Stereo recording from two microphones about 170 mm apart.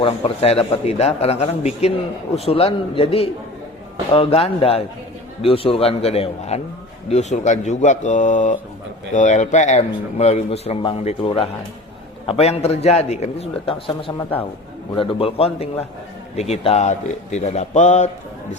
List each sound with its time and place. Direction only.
0.0 s a man's voice: 30° left (ahead or behind)
14.9 s a man's voice: 30° left (ahead or behind)